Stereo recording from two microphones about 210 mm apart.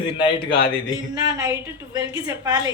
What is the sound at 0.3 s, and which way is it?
Speech, 25° left (ahead or behind).